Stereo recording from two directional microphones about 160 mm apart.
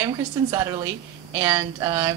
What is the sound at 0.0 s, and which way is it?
A woman's voice, 20° right (ahead or behind).